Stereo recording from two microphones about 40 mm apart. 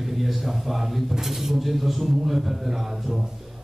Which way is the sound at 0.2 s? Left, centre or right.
Centre.